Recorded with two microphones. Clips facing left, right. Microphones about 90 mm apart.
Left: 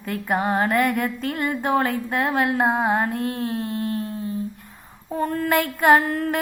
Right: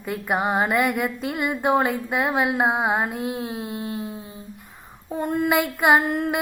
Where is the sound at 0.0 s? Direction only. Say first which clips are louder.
Even; 10° right (ahead or behind).